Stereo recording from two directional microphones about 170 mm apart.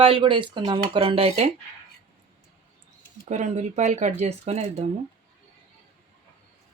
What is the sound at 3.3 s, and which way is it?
Speech, 40° right (ahead or behind).